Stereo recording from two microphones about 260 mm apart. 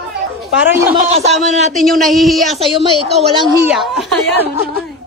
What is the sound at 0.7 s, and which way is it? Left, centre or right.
Speech, centre.